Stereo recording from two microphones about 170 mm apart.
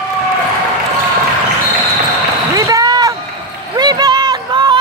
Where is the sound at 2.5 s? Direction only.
20° right (ahead or behind).